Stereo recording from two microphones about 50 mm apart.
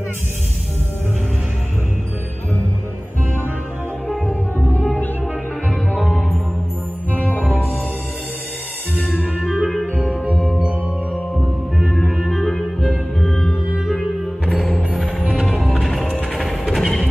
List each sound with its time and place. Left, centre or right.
4.1 s music: centre
7.4 s music: left
9.4 s music: centre
10.4 s music: right
11.8 s music: centre
13.5 s music: centre
15.3 s music: centre
16.3 s mechanisms: centre